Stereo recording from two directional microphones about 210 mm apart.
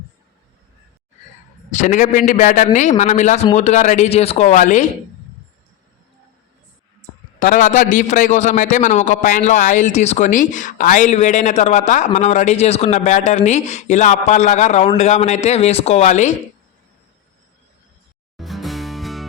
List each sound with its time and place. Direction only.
1.8 s a man's voice: 40° left (ahead or behind)
7.3 s a man's voice: 40° left (ahead or behind)
18.3 s music: centre (ahead or behind)